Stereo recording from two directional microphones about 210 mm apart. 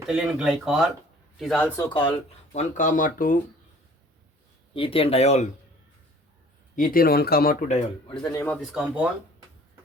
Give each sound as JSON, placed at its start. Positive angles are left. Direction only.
{"t": 0.0, "sound": "speech", "side_deg": -5}
{"t": 1.8, "sound": "speech", "side_deg": 25}
{"t": 4.7, "sound": "speech", "side_deg": 25}
{"t": 6.7, "sound": "speech", "side_deg": 40}
{"t": 8.2, "sound": "speech", "side_deg": 10}
{"t": 8.7, "sound": "speech", "side_deg": -5}